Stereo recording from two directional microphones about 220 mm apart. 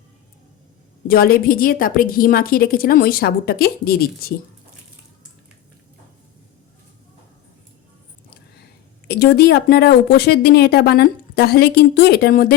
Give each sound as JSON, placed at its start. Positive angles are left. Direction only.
{"t": 1.0, "sound": "a woman's voice", "side_deg": 40}
{"t": 9.0, "sound": "a woman's voice", "side_deg": 45}